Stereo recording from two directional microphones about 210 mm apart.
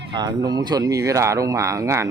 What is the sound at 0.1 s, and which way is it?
Speech, 20° right (ahead or behind).